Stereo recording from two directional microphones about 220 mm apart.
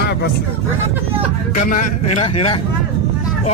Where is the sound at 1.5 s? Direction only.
30° left (ahead or behind).